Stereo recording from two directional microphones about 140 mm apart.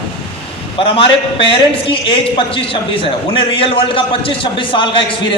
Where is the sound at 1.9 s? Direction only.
40° left (ahead or behind).